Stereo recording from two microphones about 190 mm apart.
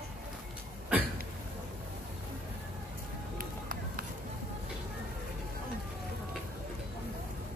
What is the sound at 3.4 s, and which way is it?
Run, 50° right (ahead or behind).